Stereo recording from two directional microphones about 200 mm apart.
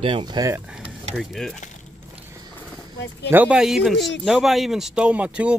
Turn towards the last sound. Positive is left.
turn(degrees=-5)  # may be behind; listen again after turning